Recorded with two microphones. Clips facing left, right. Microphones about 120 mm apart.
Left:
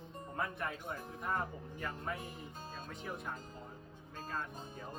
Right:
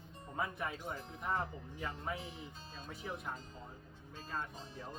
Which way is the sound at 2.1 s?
50° left (ahead or behind).